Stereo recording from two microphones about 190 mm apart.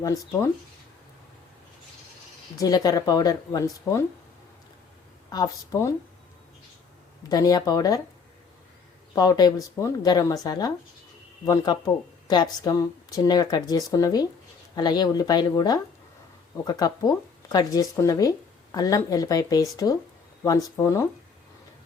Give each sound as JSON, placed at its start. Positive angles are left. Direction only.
{"t": 0.0, "sound": "speech", "side_deg": 20}
{"t": 2.6, "sound": "speech", "side_deg": 20}
{"t": 5.3, "sound": "speech", "side_deg": 20}
{"t": 7.3, "sound": "speech", "side_deg": 20}
{"t": 9.1, "sound": "speech", "side_deg": 20}